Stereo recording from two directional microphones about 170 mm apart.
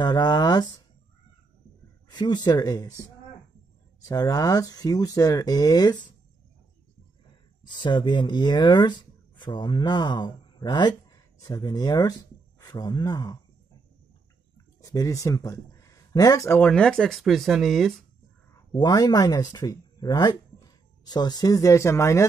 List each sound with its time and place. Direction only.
0.0 s speech: 25° left (ahead or behind)
2.0 s speech: 25° left (ahead or behind)
7.6 s speech: 25° left (ahead or behind)
14.8 s speech: 20° left (ahead or behind); by 17.9 s centre (ahead or behind)
18.7 s speech: 25° left (ahead or behind)